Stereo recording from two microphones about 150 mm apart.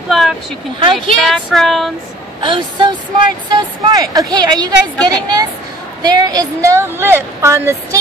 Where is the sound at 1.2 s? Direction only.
Centre (ahead or behind).